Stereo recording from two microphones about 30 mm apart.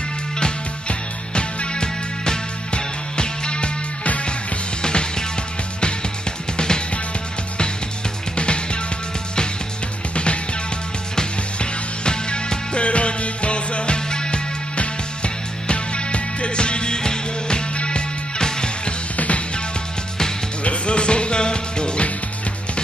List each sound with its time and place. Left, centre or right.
0.4 s music: left
4.8 s music: left
6.5 s music: left
10.1 s music: left
11.5 s music: left
19.1 s music: left
20.6 s music: left